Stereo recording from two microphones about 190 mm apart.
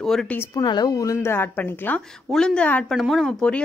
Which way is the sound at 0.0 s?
5° left (ahead or behind).